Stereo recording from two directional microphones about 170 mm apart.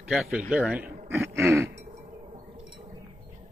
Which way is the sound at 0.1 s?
Centre (ahead or behind).